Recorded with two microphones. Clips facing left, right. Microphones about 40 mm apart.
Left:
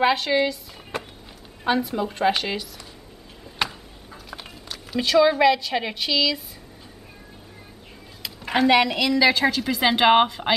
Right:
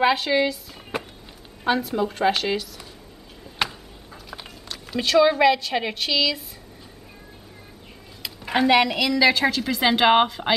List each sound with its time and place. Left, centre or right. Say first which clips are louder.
0.0 s a woman's voice: even; centre
3.5 s a sound: even; centre
8.2 s a woman's voice: left 1 dB; centre